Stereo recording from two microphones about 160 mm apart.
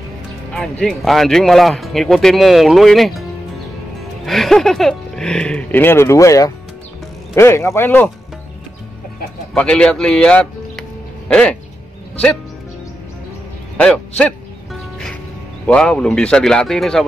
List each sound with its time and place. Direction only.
0.5 s speech: 5° left (ahead or behind)
4.3 s speech: centre (ahead or behind)
9.5 s music: 5° left (ahead or behind)
13.7 s music: 5° left (ahead or behind)
15.6 s speech: 5° left (ahead or behind)